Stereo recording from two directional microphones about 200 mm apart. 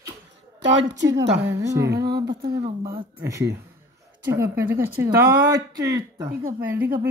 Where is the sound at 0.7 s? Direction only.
60° right (ahead or behind).